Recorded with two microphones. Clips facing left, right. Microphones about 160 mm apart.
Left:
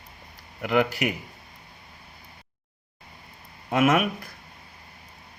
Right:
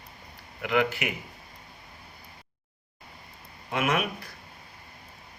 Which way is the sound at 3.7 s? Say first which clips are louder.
Left 6 dB; 45° left (ahead or behind).